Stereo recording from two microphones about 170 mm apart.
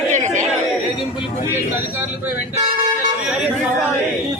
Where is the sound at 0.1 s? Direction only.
45° right (ahead or behind).